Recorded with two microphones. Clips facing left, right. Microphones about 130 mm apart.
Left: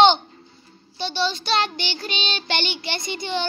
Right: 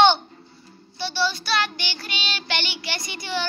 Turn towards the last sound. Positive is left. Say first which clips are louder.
# left 3 dB
turn(degrees=25)  # may be behind; listen again after turning